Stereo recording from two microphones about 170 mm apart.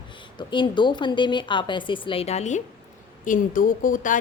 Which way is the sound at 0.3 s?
30° left (ahead or behind).